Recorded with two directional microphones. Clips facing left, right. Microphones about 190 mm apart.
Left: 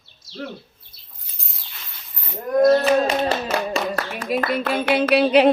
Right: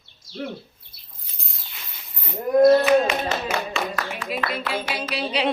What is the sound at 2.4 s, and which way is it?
Speech, 10° right (ahead or behind).